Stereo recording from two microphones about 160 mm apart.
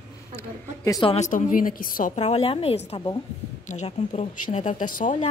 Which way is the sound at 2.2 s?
40° left (ahead or behind).